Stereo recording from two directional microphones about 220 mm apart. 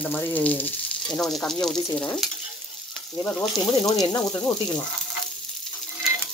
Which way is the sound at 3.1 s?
20° left (ahead or behind).